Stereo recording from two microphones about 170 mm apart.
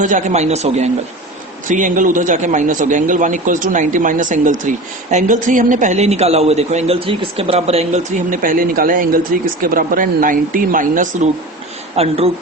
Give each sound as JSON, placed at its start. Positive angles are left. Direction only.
{"t": 0.0, "sound": "a man's voice", "side_deg": -45}
{"t": 8.3, "sound": "a man's voice", "side_deg": -55}
{"t": 11.9, "sound": "a man's voice", "side_deg": -35}